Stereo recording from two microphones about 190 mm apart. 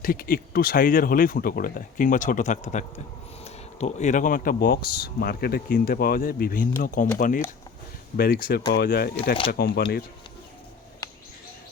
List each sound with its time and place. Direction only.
0.0 s speech: 50° left (ahead or behind)
11.0 s bird: 20° left (ahead or behind)